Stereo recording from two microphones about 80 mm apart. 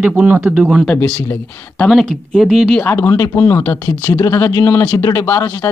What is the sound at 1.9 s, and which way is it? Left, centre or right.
Speech, centre.